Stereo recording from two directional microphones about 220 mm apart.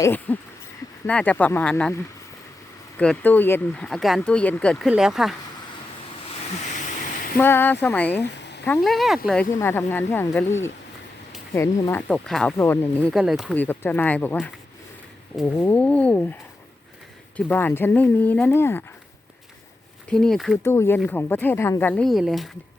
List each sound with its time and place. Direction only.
0.0 s speech: 10° left (ahead or behind)
3.0 s speech: 5° left (ahead or behind)
7.3 s speech: 10° left (ahead or behind)
8.1 s a sound: 50° left (ahead or behind)
8.6 s speech: 5° left (ahead or behind)
15.5 s speech: 10° left (ahead or behind)
17.3 s speech: 10° left (ahead or behind)
20.1 s speech: 5° left (ahead or behind)